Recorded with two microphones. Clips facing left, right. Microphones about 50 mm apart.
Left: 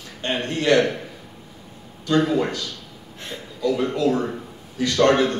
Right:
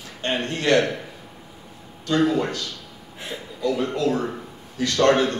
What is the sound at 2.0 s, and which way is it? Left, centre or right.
Speech, centre.